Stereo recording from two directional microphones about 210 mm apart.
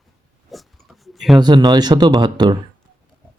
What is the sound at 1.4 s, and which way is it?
Speech, 20° right (ahead or behind).